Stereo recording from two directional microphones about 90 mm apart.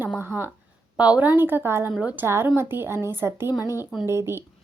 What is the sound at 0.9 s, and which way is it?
A woman's voice, 15° right (ahead or behind).